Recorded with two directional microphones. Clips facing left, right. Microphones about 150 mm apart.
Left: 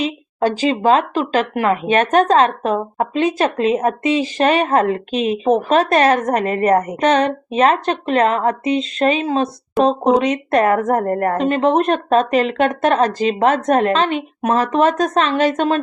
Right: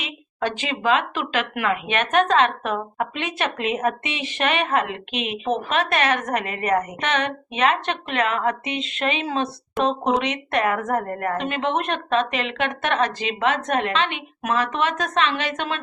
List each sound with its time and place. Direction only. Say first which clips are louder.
0.0 s speech: left 9 dB; 35° left (ahead or behind)